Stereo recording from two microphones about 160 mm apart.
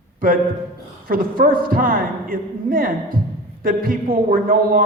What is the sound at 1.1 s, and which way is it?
Speech, 65° right (ahead or behind).